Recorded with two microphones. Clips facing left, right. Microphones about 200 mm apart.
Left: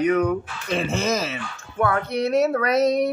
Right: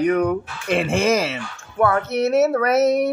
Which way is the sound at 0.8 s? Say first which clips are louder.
Right 5 dB; 30° right (ahead or behind).